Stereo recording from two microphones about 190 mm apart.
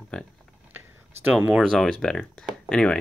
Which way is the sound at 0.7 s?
10° right (ahead or behind).